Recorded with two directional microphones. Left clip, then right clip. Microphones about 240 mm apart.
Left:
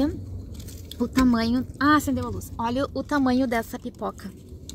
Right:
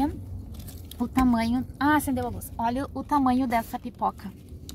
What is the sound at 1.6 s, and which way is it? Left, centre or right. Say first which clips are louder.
Speech: left 3 dB; right.